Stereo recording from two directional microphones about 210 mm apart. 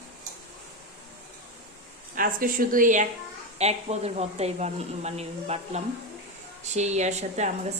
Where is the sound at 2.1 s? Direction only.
40° right (ahead or behind).